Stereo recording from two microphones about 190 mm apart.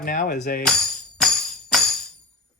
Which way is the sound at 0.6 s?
5° left (ahead or behind).